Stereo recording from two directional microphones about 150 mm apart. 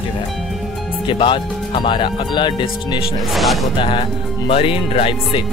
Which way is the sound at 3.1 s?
Centre (ahead or behind).